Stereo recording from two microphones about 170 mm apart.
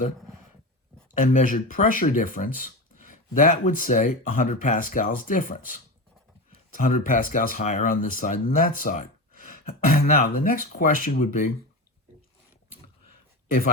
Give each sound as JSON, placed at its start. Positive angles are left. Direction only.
{"t": 1.2, "sound": "speech", "side_deg": 50}